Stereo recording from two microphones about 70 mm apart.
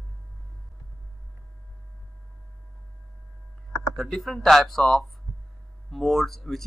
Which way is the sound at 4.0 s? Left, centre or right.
Centre.